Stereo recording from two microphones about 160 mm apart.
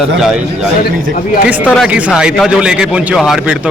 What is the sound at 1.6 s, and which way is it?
Speech, 10° left (ahead or behind).